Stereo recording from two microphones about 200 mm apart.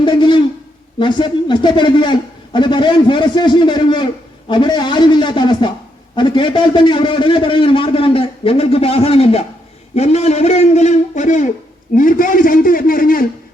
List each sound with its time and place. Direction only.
0.0 s a man's voice: 25° left (ahead or behind); by 13.2 s 45° left (ahead or behind)